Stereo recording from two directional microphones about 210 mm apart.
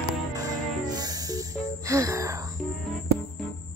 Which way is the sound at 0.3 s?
15° right (ahead or behind).